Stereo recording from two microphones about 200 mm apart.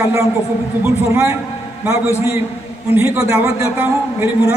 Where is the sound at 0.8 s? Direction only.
10° right (ahead or behind).